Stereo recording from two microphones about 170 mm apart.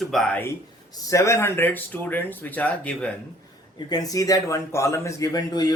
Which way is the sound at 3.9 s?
20° left (ahead or behind).